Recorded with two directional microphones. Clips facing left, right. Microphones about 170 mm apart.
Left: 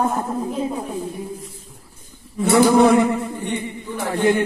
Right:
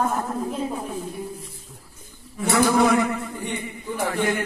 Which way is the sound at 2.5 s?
25° left (ahead or behind).